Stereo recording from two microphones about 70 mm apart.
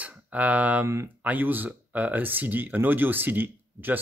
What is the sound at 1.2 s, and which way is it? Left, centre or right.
Speech, right.